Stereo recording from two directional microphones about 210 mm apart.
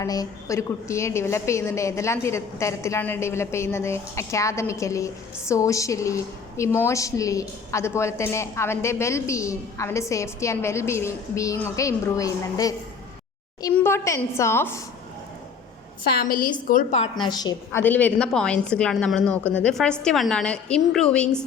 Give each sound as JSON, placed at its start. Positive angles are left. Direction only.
{"t": 0.0, "sound": "a woman's voice", "side_deg": 15}
{"t": 13.7, "sound": "a woman's voice", "side_deg": 10}
{"t": 16.1, "sound": "a woman's voice", "side_deg": 40}
{"t": 17.2, "sound": "a woman's voice", "side_deg": 20}